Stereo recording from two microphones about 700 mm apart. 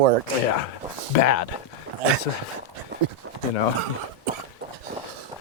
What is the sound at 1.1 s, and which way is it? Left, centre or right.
Speech, left.